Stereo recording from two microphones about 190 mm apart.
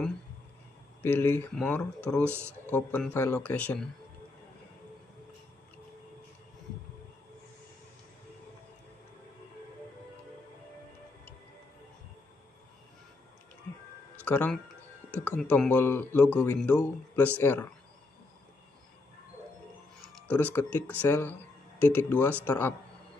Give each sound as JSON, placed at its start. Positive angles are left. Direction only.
{"t": 1.0, "sound": "speech", "side_deg": 10}
{"t": 2.2, "sound": "speech", "side_deg": -10}
{"t": 2.6, "sound": "speech", "side_deg": 10}
{"t": 14.2, "sound": "speech", "side_deg": 5}
{"t": 20.2, "sound": "tick-tock", "side_deg": 10}
{"t": 20.5, "sound": "speech", "side_deg": 10}